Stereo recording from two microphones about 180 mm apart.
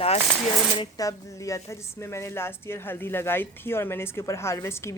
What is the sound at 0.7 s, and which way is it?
A woman's voice, 20° left (ahead or behind).